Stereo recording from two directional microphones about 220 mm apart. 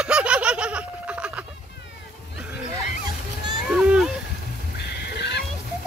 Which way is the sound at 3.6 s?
Centre (ahead or behind).